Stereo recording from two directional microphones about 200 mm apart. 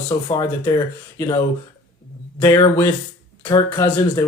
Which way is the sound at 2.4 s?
15° left (ahead or behind).